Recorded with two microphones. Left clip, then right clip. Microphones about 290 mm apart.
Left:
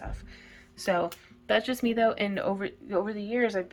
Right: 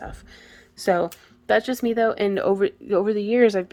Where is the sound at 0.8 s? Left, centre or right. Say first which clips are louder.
Right 6 dB; right.